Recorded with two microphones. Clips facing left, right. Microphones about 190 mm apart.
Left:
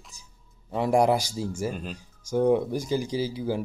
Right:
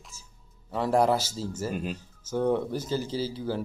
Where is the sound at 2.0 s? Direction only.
15° left (ahead or behind).